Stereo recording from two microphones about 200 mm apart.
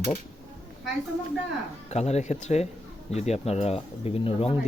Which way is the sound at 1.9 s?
30° left (ahead or behind).